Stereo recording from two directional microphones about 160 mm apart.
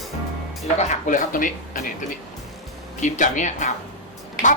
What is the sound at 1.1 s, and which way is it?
Speech, 55° left (ahead or behind).